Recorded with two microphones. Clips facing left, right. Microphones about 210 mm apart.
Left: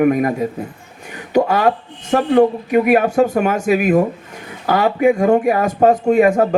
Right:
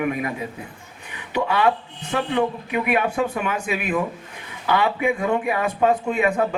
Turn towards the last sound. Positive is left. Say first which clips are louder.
# left 8 dB
turn(degrees=45)  # may be behind; listen again after turning